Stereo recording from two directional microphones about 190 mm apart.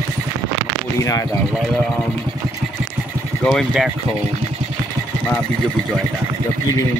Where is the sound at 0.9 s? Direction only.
15° left (ahead or behind).